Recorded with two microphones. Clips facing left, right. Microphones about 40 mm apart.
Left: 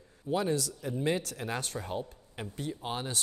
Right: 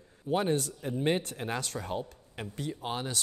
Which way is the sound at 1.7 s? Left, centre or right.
Right.